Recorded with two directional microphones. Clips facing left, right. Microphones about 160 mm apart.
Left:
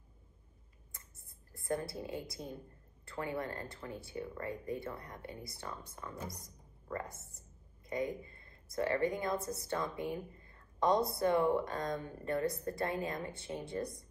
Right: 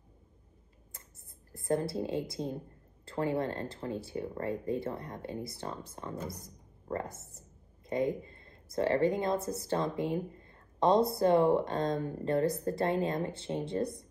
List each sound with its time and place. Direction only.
1.5 s a woman's voice: 30° right (ahead or behind)